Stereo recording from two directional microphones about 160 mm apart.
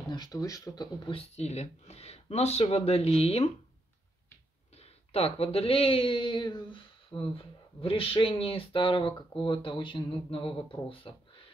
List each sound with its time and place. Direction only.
0.1 s speech: 25° left (ahead or behind)
1.1 s speech: 45° left (ahead or behind)
4.7 s speech: 40° left (ahead or behind)